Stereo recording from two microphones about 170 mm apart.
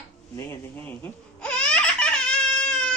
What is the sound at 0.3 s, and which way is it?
Baby laughter, 15° left (ahead or behind).